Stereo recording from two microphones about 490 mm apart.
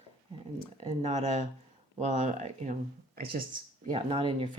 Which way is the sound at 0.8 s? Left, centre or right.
Centre.